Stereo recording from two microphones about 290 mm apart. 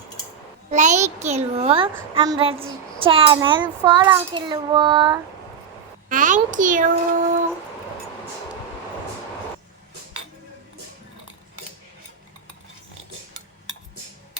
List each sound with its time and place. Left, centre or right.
0.7 s a child's voice: right
2.0 s child singing: centre
6.1 s a child's voice: right